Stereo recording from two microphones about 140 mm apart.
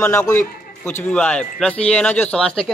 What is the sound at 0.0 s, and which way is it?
A man's voice, 15° left (ahead or behind).